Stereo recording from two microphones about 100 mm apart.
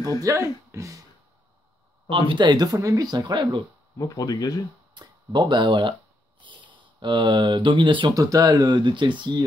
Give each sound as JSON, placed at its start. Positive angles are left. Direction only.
{"t": 0.2, "sound": "speech", "side_deg": -30}
{"t": 2.0, "sound": "speech", "side_deg": -60}
{"t": 3.9, "sound": "speech", "side_deg": 30}
{"t": 4.9, "sound": "speech", "side_deg": -50}
{"t": 8.1, "sound": "speech", "side_deg": -35}